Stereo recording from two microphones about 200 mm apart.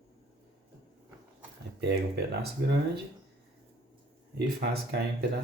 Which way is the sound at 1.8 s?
55° right (ahead or behind).